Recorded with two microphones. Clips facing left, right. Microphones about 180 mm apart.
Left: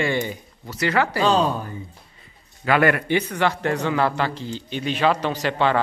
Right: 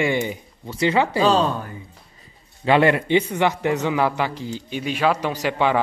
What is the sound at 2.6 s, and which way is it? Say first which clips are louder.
Speech: right 2 dB; 25° right (ahead or behind).